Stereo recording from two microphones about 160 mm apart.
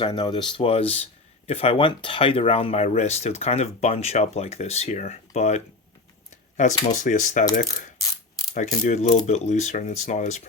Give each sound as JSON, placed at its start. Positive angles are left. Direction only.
{"t": 0.0, "sound": "speech", "side_deg": 30}
{"t": 6.9, "sound": "speech", "side_deg": 50}
{"t": 8.5, "sound": "speech", "side_deg": 50}